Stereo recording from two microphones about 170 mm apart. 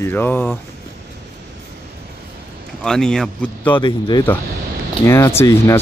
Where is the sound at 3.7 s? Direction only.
25° left (ahead or behind).